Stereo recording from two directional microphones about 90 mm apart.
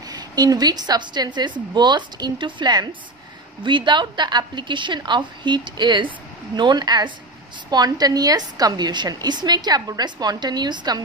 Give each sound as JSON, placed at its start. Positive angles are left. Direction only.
{"t": 0.1, "sound": "a woman's voice", "side_deg": -45}